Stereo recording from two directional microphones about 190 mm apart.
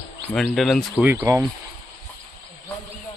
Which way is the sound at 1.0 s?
10° right (ahead or behind).